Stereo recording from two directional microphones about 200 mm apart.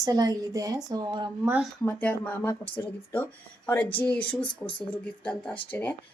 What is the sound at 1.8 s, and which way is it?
Speech, 10° left (ahead or behind).